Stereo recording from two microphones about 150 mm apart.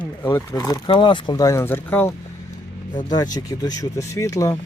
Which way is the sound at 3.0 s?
25° left (ahead or behind).